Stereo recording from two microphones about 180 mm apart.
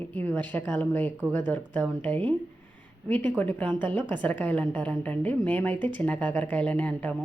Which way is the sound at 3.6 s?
25° right (ahead or behind).